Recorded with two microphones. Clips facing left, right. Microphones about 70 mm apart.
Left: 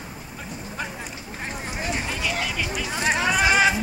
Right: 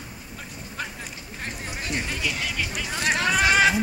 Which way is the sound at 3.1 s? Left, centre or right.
Centre.